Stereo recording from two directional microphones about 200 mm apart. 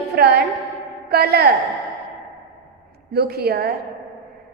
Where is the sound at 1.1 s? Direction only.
50° right (ahead or behind).